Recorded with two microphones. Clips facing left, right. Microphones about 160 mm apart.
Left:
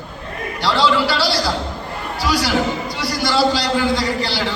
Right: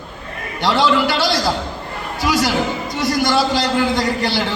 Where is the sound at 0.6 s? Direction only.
20° right (ahead or behind).